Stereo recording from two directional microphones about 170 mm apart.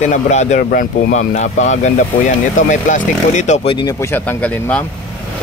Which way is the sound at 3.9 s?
15° left (ahead or behind).